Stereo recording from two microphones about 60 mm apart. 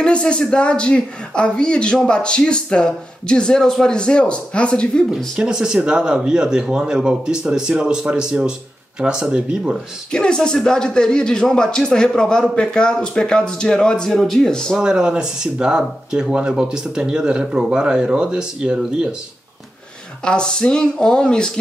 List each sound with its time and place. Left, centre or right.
0.0 s speech: centre
5.1 s speech: centre
10.1 s speech: centre
14.8 s speech: centre
20.2 s speech: centre